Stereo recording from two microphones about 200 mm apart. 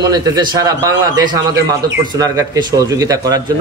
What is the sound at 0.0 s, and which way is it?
A man's voice, 20° right (ahead or behind).